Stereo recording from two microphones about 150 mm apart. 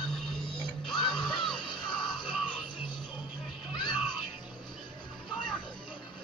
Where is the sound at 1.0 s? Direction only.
30° left (ahead or behind).